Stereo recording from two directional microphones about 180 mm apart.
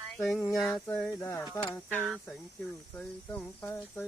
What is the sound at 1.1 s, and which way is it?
Speech, 20° left (ahead or behind).